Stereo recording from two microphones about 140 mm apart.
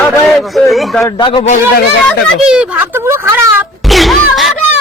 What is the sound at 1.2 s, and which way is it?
Speech, 35° left (ahead or behind).